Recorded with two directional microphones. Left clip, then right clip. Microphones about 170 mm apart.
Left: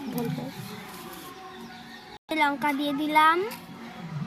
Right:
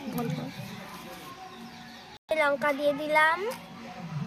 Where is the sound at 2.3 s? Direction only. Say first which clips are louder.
Even; 45° right (ahead or behind).